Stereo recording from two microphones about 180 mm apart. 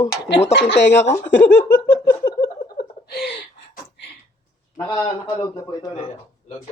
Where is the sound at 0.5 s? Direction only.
70° left (ahead or behind).